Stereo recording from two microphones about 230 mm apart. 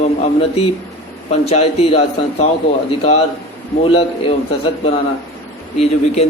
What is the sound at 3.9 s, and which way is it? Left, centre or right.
Speech, left.